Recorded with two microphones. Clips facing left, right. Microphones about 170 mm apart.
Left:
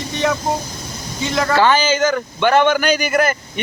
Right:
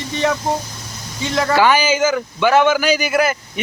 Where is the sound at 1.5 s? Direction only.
10° right (ahead or behind).